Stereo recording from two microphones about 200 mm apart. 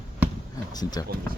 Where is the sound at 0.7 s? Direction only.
20° left (ahead or behind).